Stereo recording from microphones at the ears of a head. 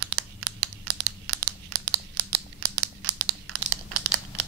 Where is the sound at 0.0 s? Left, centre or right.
Right.